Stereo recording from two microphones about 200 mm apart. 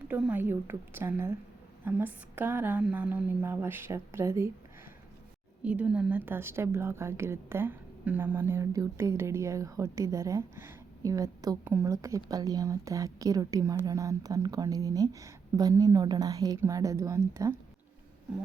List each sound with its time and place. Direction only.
0.1 s a woman's voice: 10° right (ahead or behind)
5.6 s a woman's voice: 5° right (ahead or behind)